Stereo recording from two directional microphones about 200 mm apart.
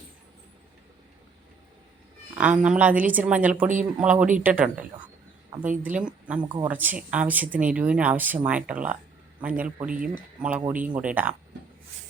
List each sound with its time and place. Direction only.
2.3 s speech: 5° right (ahead or behind)
6.4 s speech: 20° right (ahead or behind)
6.7 s speech: 10° right (ahead or behind)